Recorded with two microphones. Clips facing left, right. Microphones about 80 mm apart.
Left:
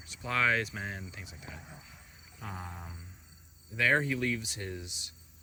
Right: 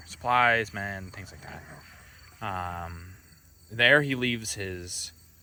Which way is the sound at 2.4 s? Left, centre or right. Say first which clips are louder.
Right 10 dB; right.